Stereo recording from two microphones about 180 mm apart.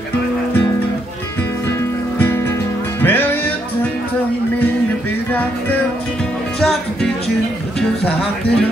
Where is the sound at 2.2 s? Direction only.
10° left (ahead or behind).